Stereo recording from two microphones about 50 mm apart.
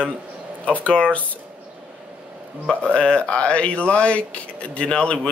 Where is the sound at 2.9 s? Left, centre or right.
Left.